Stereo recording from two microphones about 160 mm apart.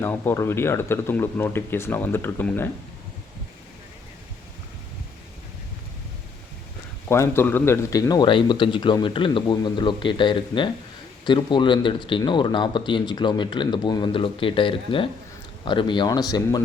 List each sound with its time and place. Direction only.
0.0 s speech: 15° left (ahead or behind)
7.1 s speech: 15° left (ahead or behind)